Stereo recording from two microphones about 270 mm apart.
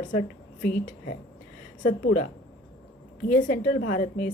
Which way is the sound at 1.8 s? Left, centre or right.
Left.